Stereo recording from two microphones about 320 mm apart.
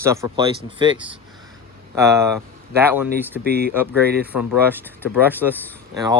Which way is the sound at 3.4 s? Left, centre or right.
Right.